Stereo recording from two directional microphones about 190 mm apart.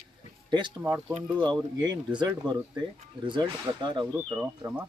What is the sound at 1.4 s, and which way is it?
Speech, 20° right (ahead or behind).